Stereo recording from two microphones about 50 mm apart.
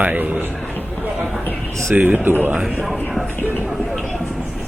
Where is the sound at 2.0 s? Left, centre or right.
Right.